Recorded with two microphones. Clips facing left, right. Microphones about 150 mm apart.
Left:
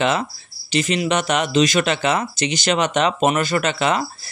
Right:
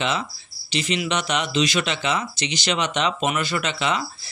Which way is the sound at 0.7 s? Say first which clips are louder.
Left 5 dB; 50° left (ahead or behind).